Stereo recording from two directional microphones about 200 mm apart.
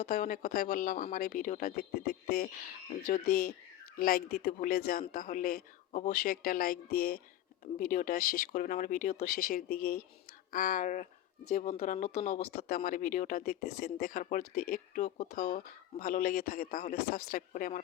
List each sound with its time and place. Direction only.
0.1 s speech: 40° left (ahead or behind)